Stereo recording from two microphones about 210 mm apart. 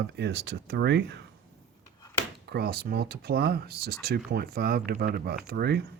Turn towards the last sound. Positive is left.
turn(degrees=-50)  # may be behind; listen again after turning